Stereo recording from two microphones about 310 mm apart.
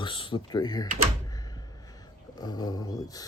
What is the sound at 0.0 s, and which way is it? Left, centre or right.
Speech, centre.